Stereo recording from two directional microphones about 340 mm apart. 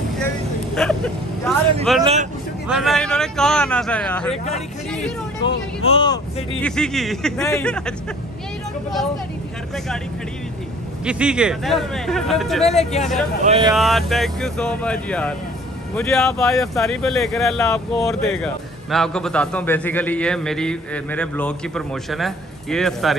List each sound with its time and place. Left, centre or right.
0.7 s vehicle: centre
1.9 s speech: centre
5.4 s speech: centre
6.6 s speech: centre
11.1 s speech: centre
12.7 s speech: centre
13.4 s speech: centre
13.7 s speech: centre